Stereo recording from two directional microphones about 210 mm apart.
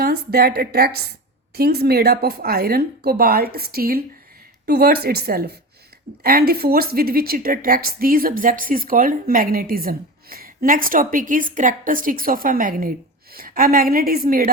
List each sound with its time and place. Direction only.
0.0 s a woman's voice: 45° right (ahead or behind)